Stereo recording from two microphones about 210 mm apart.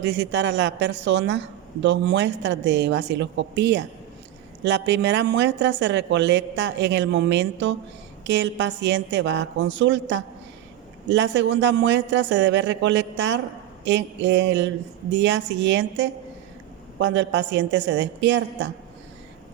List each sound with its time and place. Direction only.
0.0 s speech: 55° right (ahead or behind)